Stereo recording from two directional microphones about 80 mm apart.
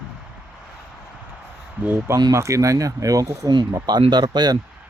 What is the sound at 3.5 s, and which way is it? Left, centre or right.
Speech, right.